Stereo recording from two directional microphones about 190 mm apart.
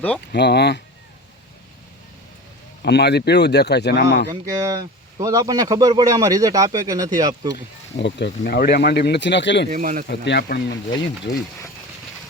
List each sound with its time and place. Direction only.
0.3 s speech: 60° left (ahead or behind)
2.8 s speech: 60° left (ahead or behind)
4.3 s a man's voice: 20° right (ahead or behind)
7.9 s speech: 65° left (ahead or behind)
9.6 s speech: 45° right (ahead or behind)
10.2 s speech: 65° left (ahead or behind)